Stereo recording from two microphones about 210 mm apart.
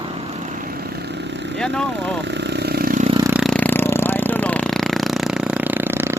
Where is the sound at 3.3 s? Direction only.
Centre (ahead or behind).